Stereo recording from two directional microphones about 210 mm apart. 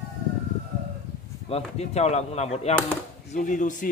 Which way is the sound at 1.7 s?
30° left (ahead or behind).